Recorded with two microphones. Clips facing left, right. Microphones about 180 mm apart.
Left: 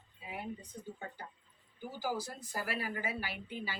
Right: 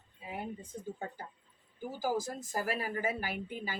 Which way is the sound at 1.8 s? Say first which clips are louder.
Right 4 dB; 45° right (ahead or behind).